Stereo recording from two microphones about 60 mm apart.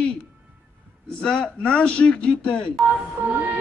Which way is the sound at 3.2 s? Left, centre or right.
Right.